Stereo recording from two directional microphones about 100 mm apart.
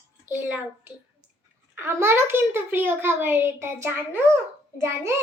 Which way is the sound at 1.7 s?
25° right (ahead or behind).